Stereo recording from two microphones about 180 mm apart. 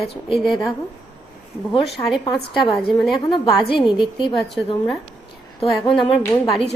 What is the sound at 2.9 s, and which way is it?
Speech, centre (ahead or behind).